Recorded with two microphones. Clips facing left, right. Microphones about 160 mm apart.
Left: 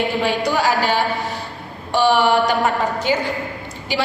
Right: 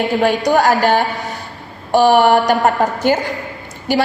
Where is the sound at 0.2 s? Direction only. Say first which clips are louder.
Right 8 dB; 45° right (ahead or behind).